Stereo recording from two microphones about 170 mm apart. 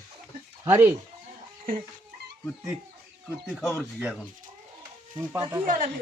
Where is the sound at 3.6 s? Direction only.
10° left (ahead or behind).